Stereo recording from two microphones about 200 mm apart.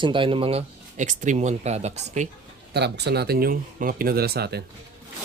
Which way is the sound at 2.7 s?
55° right (ahead or behind).